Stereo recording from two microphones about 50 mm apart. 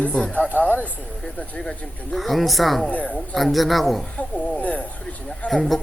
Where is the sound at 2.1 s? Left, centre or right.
Centre.